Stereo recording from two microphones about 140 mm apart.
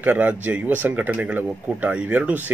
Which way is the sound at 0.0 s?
10° right (ahead or behind).